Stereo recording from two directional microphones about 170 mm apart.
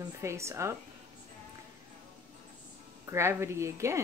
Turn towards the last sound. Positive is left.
turn(degrees=-15)  # may be behind; listen again after turning